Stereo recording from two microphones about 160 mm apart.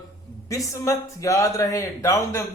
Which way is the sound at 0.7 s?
20° left (ahead or behind).